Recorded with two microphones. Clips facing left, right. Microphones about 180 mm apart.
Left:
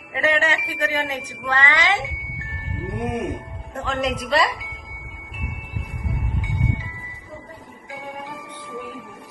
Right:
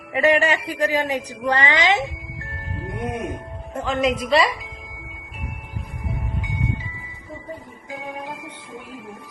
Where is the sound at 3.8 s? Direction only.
Centre (ahead or behind).